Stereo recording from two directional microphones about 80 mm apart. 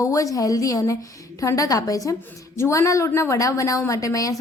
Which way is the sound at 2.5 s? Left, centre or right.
Left.